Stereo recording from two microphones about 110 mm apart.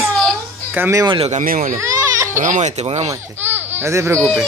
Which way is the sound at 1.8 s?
25° right (ahead or behind).